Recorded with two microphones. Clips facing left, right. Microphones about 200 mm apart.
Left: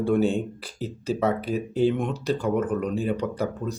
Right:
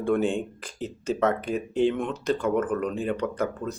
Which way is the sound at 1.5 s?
35° left (ahead or behind).